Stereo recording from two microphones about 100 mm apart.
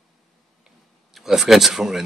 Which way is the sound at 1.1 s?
5° right (ahead or behind).